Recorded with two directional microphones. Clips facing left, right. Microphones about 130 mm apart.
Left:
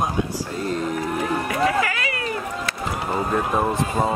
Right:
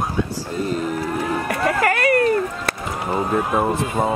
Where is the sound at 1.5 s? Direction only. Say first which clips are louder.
Right 3 dB; 50° right (ahead or behind).